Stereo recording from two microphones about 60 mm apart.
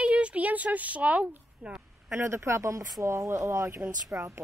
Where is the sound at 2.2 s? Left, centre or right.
Right.